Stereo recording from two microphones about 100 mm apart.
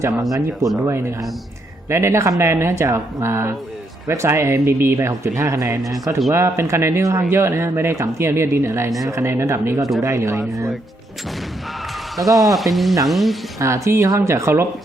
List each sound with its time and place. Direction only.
0.3 s speech: 35° right (ahead or behind)
1.9 s speech: 30° right (ahead or behind)
12.4 s speech: centre (ahead or behind)
13.6 s speech: 30° right (ahead or behind)